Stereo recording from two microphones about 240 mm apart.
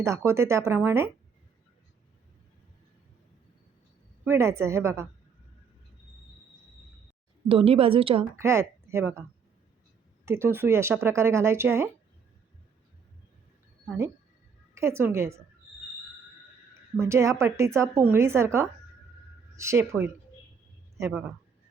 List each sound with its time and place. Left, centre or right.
0.0 s a woman's voice: centre
4.3 s a woman's voice: centre
7.4 s a woman's voice: right
8.3 s a woman's voice: centre
10.2 s a woman's voice: centre
13.8 s a woman's voice: centre
17.0 s a woman's voice: centre